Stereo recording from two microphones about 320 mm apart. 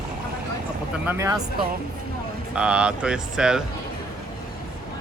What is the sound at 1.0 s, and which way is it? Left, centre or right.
Speech, centre.